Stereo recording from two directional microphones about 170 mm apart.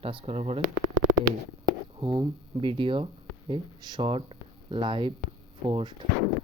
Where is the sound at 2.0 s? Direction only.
30° right (ahead or behind).